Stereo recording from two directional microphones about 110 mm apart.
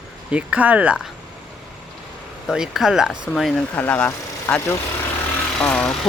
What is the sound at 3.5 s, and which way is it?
Speech, 15° left (ahead or behind).